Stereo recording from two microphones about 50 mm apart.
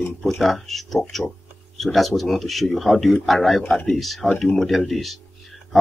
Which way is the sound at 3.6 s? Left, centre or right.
Centre.